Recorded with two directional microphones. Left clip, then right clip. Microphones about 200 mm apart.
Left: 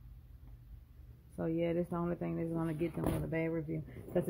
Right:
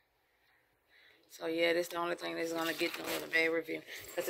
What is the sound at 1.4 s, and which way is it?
Speech, 5° right (ahead or behind).